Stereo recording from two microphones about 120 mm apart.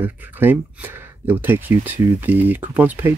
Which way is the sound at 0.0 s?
15° right (ahead or behind).